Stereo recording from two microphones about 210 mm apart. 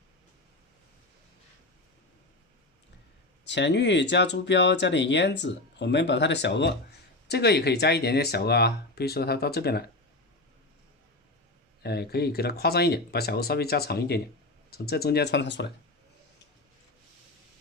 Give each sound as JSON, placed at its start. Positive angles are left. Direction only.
{"t": 3.4, "sound": "speech", "side_deg": 55}
{"t": 11.8, "sound": "speech", "side_deg": 50}